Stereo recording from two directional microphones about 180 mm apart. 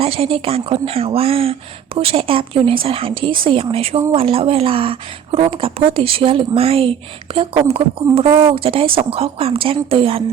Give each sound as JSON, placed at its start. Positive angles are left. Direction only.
{"t": 0.0, "sound": "a woman's voice", "side_deg": -30}